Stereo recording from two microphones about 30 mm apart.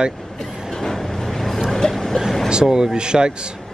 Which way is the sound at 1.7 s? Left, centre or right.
Centre.